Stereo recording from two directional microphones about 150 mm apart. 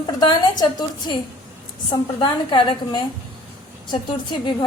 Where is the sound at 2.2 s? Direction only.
35° left (ahead or behind).